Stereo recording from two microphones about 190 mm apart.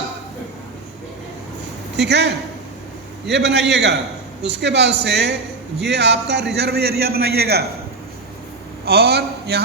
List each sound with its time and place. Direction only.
2.0 s a man's voice: 65° right (ahead or behind)
8.8 s a man's voice: 55° right (ahead or behind)